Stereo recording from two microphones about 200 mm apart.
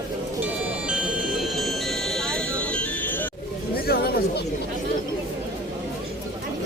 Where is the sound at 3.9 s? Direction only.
50° left (ahead or behind).